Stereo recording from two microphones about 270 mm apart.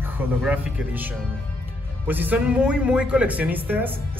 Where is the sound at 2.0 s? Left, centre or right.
Centre.